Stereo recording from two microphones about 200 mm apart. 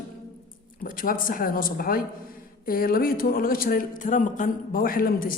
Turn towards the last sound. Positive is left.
turn(degrees=45)  # may be behind; listen again after turning